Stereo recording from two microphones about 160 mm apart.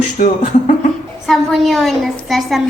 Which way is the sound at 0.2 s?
55° left (ahead or behind).